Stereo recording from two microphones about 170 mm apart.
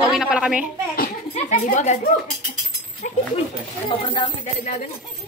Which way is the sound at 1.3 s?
45° left (ahead or behind).